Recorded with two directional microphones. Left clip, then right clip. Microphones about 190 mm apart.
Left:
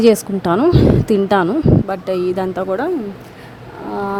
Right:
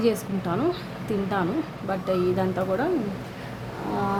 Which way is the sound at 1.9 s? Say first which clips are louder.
Left 6 dB; 45° left (ahead or behind).